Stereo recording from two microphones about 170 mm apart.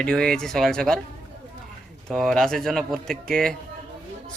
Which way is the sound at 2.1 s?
Centre (ahead or behind).